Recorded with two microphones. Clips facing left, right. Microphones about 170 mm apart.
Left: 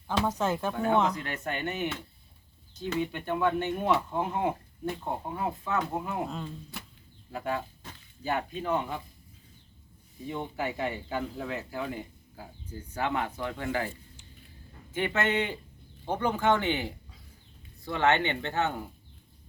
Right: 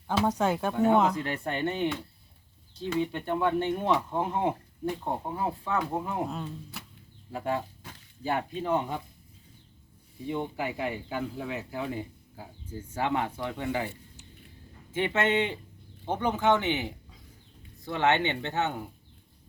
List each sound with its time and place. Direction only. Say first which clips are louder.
0.1 s speech: right 2 dB; 10° right (ahead or behind)
0.7 s speech: right 4 dB; 25° right (ahead or behind)
3.0 s speech: even; 30° right (ahead or behind)
6.3 s speech: right 1 dB; 5° right (ahead or behind)
7.3 s speech: right 2 dB; 25° right (ahead or behind)
7.8 s a sound: even; 10° right (ahead or behind)
8.2 s speech: right 1 dB; 25° right (ahead or behind)
10.2 s speech: right 2 dB; 15° right (ahead or behind)
14.9 s speech: right 2 dB; 25° right (ahead or behind)